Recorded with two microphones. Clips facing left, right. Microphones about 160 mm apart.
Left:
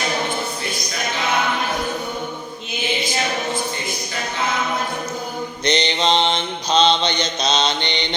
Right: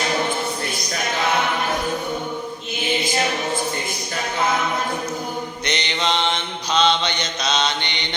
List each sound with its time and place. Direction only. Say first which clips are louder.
5.6 s mantra: left 6 dB; 30° left (ahead or behind)